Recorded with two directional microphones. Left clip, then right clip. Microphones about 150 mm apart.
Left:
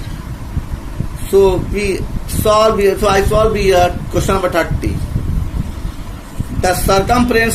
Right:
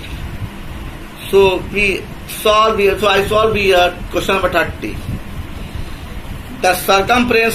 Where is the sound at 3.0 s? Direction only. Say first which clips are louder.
Even; 50° left (ahead or behind).